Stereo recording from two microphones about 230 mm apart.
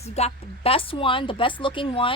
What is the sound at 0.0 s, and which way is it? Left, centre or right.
Speech, left.